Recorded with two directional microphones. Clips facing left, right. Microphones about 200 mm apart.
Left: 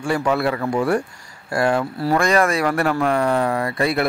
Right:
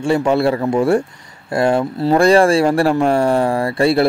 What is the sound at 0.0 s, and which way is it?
Speech, 25° right (ahead or behind).